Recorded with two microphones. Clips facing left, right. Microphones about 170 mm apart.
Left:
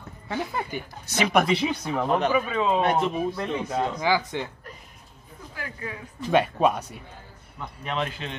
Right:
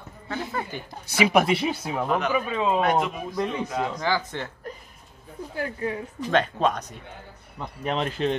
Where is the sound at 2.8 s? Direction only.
30° left (ahead or behind).